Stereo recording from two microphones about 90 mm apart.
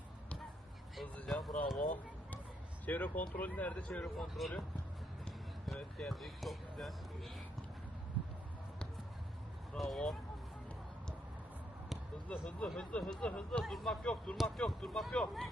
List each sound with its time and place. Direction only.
1.0 s speech: 10° left (ahead or behind)
1.5 s speech: centre (ahead or behind)
2.8 s speech: 15° left (ahead or behind)
4.0 s speech: centre (ahead or behind)
5.6 s speech: 5° left (ahead or behind)
9.7 s speech: centre (ahead or behind)
12.3 s speech: 15° left (ahead or behind)